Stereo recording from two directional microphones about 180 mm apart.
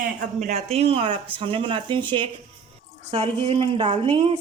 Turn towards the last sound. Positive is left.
turn(degrees=-30)  # may be behind; listen again after turning